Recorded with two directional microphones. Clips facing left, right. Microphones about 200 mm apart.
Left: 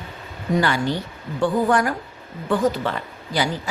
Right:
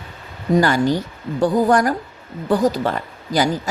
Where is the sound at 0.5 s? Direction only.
40° right (ahead or behind).